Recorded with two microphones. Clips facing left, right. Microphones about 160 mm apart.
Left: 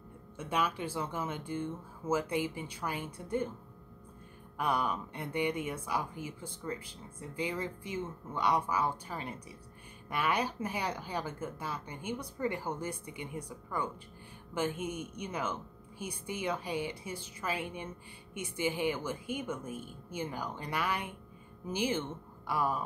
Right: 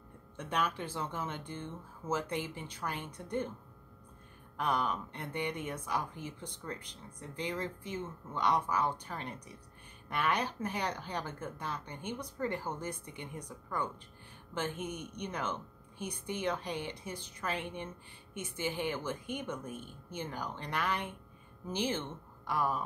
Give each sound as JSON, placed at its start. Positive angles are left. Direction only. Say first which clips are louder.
{"t": 0.4, "sound": "speech", "louder": "left 1 dB", "side_deg": 10}
{"t": 4.6, "sound": "speech", "louder": "left 1 dB", "side_deg": 10}